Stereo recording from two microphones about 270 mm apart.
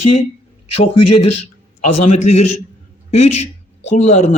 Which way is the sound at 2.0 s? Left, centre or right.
Left.